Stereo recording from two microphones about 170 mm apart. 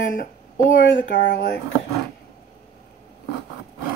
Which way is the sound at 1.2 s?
75° left (ahead or behind).